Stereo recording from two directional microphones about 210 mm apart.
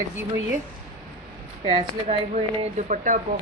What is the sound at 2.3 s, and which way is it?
Speech, 30° right (ahead or behind).